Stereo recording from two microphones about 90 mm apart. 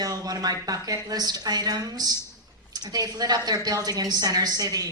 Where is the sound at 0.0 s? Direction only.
45° right (ahead or behind).